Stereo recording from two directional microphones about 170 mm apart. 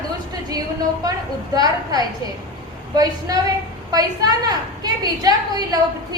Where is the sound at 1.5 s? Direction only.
25° right (ahead or behind).